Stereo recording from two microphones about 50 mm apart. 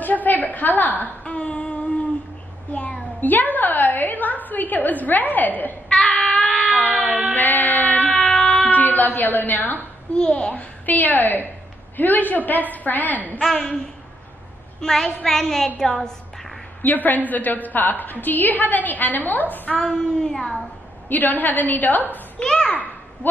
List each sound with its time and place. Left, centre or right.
0.0 s a sound: left
5.9 s child singing: centre
6.3 s cat: centre
7.1 s a sound: right
7.3 s music: left
8.5 s a woman's voice: left
10.1 s a child's voice: centre
10.5 s a woman's voice: left
13.4 s speech: centre
14.8 s a woman's voice: centre
16.8 s a woman's voice: left
19.8 s speech: centre
21.1 s a woman's voice: left
22.4 s speech: centre